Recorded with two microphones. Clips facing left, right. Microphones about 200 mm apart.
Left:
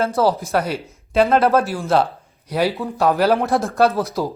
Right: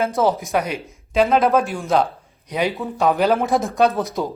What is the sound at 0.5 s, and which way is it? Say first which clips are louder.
Speech: left 1 dB; 15° right (ahead or behind).